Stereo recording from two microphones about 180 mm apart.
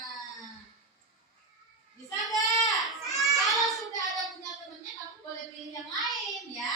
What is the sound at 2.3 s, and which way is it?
Goat, 20° left (ahead or behind).